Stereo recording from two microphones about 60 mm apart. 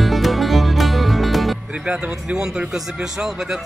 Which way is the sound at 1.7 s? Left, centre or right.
Centre.